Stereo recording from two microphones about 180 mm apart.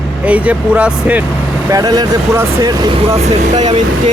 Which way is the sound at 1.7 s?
20° right (ahead or behind).